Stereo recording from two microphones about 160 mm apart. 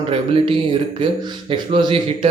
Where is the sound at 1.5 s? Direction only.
30° right (ahead or behind).